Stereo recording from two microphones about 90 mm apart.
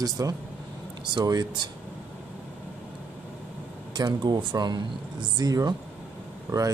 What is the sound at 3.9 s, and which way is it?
Speech, 50° right (ahead or behind).